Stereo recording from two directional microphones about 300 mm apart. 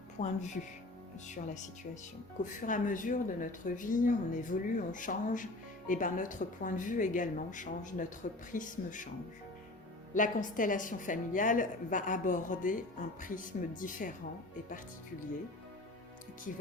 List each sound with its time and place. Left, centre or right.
0.2 s a woman's voice: left
10.2 s a woman's voice: left